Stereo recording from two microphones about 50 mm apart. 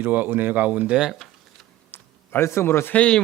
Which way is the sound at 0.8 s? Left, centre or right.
Centre.